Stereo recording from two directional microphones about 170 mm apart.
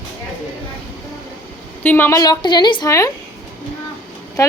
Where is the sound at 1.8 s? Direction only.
10° left (ahead or behind).